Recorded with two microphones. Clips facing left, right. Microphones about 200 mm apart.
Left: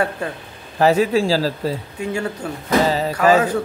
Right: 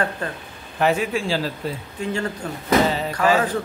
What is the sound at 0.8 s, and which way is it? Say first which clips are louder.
Speech: left 5 dB; 35° left (ahead or behind).